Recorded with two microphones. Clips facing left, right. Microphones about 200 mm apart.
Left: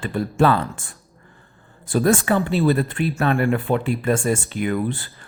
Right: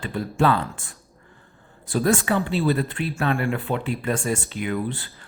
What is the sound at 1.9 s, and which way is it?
Speech, 50° left (ahead or behind).